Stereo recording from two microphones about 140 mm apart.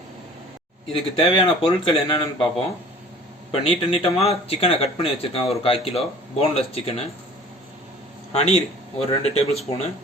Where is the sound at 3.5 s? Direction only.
45° left (ahead or behind).